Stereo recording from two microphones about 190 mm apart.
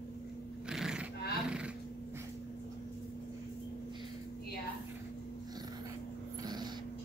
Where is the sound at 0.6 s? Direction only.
5° right (ahead or behind).